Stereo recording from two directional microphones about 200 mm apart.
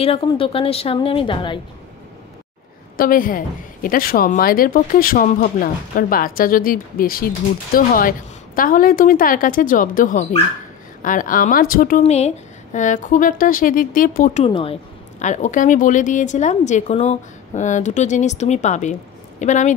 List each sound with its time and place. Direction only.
0.0 s a woman's voice: 30° left (ahead or behind)
3.0 s a woman's voice: 45° left (ahead or behind)
12.0 s speech: 35° left (ahead or behind)
14.4 s speech: 30° left (ahead or behind)